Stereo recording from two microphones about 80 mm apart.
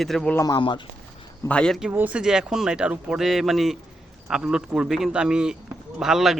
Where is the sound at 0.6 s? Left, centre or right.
Left.